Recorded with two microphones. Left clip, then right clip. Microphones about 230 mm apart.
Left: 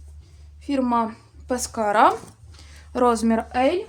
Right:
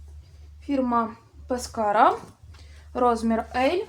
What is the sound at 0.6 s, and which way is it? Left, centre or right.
A woman's voice, left.